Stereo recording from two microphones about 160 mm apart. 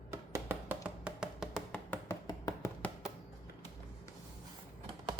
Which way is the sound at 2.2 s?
20° left (ahead or behind).